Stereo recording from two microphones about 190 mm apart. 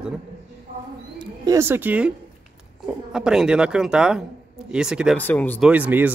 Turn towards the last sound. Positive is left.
turn(degrees=-10)  # may be behind; listen again after turning